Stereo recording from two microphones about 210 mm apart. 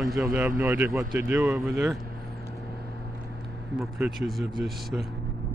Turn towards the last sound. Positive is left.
turn(degrees=0)  # may be behind; listen again after turning